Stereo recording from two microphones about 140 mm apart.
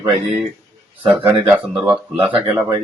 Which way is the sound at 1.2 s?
15° right (ahead or behind).